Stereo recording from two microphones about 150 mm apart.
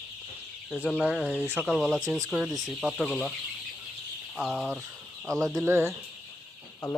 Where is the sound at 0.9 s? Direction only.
5° right (ahead or behind).